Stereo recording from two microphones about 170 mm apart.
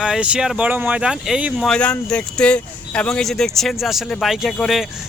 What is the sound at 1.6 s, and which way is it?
Speech, 5° left (ahead or behind).